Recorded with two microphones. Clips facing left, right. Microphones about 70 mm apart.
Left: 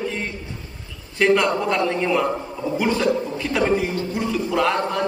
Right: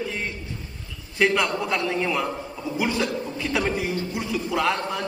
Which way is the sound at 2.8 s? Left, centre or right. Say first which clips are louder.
Left 5 dB; centre.